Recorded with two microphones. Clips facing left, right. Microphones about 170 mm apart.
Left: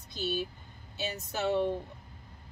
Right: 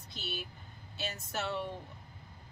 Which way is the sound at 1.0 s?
20° left (ahead or behind).